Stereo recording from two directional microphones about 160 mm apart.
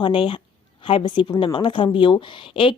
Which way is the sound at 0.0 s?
30° left (ahead or behind).